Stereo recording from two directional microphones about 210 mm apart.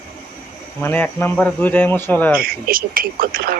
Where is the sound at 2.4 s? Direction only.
45° right (ahead or behind).